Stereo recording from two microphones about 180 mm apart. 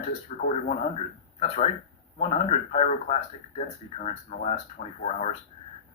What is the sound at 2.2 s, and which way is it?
Speech, 35° left (ahead or behind).